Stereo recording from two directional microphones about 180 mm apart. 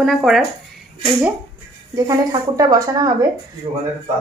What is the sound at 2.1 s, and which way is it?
Speech, 20° right (ahead or behind).